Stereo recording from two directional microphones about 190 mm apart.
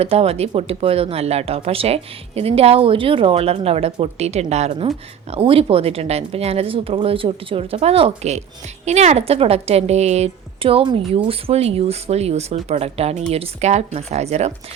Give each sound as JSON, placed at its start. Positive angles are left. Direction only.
{"t": 0.0, "sound": "a woman's voice", "side_deg": -30}